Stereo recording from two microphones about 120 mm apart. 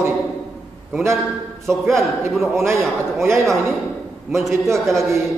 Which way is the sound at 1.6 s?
Centre (ahead or behind).